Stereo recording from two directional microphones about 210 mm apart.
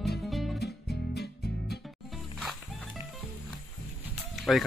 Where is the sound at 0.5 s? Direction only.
50° left (ahead or behind).